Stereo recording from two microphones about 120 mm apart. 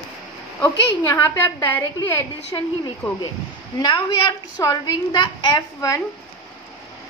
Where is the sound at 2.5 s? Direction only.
30° left (ahead or behind).